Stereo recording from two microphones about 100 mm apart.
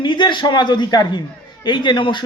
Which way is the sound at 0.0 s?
50° left (ahead or behind).